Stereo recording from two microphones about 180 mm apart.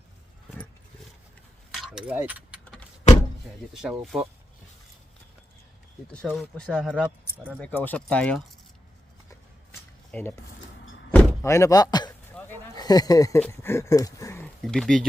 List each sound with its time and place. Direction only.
1.7 s keys jangling: centre (ahead or behind)
3.8 s speech: centre (ahead or behind)
6.2 s speech: centre (ahead or behind)
10.1 s speech: 10° left (ahead or behind)
11.1 s door: 10° left (ahead or behind)
12.4 s a sound: 5° left (ahead or behind)
12.7 s speech: 20° left (ahead or behind)
14.6 s speech: centre (ahead or behind)